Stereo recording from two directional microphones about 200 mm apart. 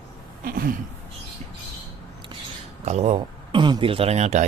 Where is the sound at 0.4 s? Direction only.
45° right (ahead or behind).